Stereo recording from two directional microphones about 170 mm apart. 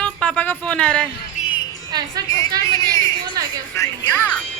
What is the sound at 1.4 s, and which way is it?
Music, 45° left (ahead or behind).